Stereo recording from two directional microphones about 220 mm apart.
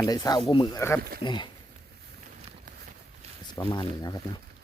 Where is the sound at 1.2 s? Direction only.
20° left (ahead or behind).